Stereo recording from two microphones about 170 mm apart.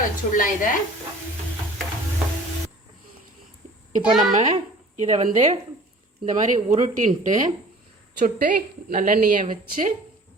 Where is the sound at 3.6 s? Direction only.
40° right (ahead or behind).